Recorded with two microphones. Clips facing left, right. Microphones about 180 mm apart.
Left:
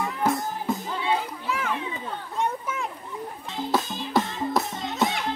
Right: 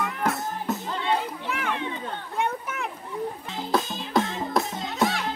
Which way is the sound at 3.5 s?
Centre (ahead or behind).